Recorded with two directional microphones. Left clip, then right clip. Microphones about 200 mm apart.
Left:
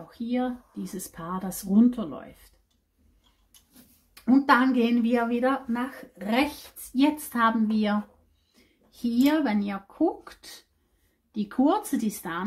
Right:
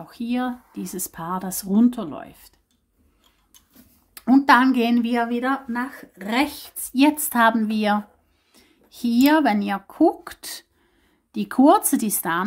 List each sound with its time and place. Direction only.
0.1 s speech: 35° right (ahead or behind)
4.1 s a woman's voice: 25° right (ahead or behind)
9.0 s speech: 30° right (ahead or behind)